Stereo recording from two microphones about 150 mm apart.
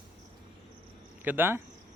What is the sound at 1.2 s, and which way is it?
Speech, 15° right (ahead or behind).